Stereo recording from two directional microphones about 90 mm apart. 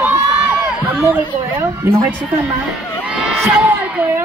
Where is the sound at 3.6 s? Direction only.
15° right (ahead or behind).